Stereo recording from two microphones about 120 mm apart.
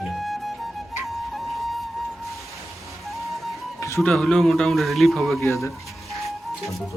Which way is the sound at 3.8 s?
25° left (ahead or behind).